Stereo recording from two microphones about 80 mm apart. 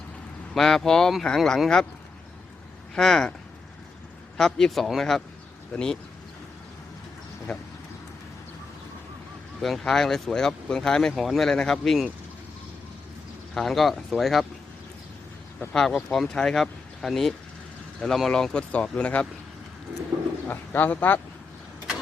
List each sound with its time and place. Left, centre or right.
0.5 s speech: centre
2.9 s speech: centre
4.4 s speech: centre
7.5 s speech: centre
9.6 s speech: centre
13.5 s speech: centre
15.7 s speech: centre
20.5 s speech: left